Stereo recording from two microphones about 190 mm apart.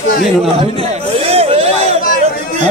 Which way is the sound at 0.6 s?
30° right (ahead or behind).